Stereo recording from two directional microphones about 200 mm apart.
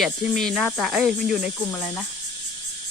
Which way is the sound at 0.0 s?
Centre (ahead or behind).